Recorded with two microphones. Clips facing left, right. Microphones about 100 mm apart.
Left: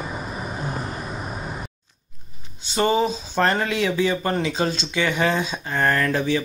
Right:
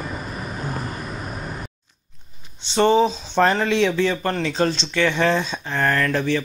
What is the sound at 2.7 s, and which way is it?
Speech, 5° left (ahead or behind).